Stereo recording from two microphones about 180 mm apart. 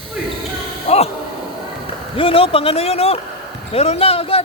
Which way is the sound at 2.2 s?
30° left (ahead or behind).